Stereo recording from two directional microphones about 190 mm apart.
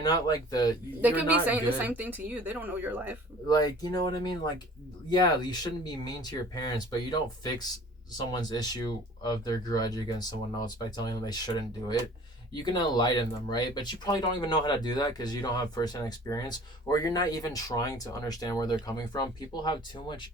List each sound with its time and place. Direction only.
0.0 s speech: 20° left (ahead or behind)
1.0 s speech: 10° right (ahead or behind)
3.5 s speech: 20° left (ahead or behind)